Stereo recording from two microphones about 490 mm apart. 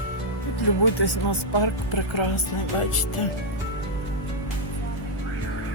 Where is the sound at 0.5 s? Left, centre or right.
Left.